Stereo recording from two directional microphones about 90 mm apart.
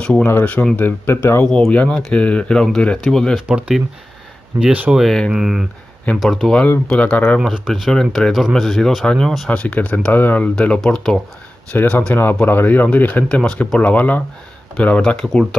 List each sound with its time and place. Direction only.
0.0 s speech: 10° left (ahead or behind)
0.3 s speech: 20° left (ahead or behind)
1.7 s speech: 10° left (ahead or behind)
3.3 s speech: 10° right (ahead or behind)
4.9 s speech: 5° left (ahead or behind)
5.3 s speech: 5° right (ahead or behind)
6.9 s speech: 15° left (ahead or behind)
7.3 s speech: 5° right (ahead or behind)
9.5 s speech: 15° left (ahead or behind)
11.7 s speech: 20° left (ahead or behind)